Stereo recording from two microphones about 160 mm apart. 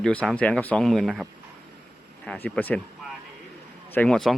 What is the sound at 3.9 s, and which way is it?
Speech, 5° left (ahead or behind).